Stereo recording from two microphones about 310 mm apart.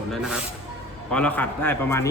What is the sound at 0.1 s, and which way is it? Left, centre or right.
A man's voice, centre.